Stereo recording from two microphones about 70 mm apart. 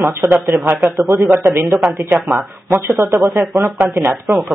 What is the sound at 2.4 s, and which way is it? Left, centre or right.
Speech, right.